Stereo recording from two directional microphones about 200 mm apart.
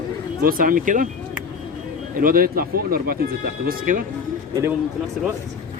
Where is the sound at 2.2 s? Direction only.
45° right (ahead or behind).